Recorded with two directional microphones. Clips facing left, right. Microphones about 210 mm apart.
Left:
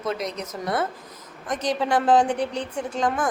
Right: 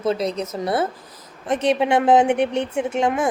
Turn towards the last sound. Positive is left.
turn(degrees=-25)  # may be behind; listen again after turning